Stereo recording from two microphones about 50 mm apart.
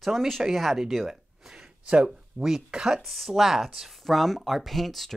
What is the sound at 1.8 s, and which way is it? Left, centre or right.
Speech, right.